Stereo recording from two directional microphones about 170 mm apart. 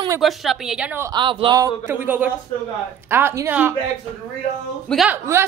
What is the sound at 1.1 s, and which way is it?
A woman's voice, 30° right (ahead or behind).